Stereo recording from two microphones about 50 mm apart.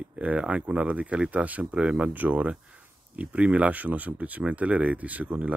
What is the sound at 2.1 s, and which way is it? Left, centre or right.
Speech, right.